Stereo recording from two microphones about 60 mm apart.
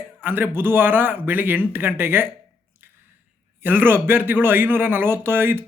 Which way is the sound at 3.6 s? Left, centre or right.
Right.